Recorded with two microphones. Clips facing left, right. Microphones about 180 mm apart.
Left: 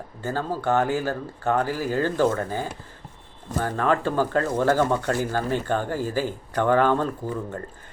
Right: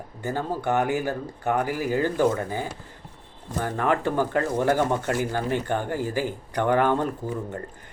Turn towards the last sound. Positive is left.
turn(degrees=-15)  # may be behind; listen again after turning